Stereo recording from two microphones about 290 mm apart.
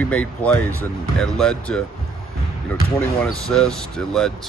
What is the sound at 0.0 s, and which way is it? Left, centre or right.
Speech, centre.